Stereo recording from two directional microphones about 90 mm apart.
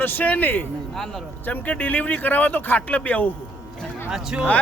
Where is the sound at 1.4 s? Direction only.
20° left (ahead or behind).